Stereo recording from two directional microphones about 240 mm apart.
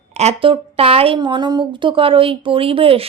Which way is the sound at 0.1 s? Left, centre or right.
Right.